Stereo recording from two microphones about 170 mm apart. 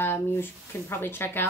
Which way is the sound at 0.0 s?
15° left (ahead or behind).